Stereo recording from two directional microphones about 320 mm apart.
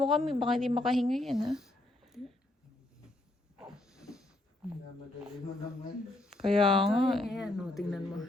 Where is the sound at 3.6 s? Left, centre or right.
Centre.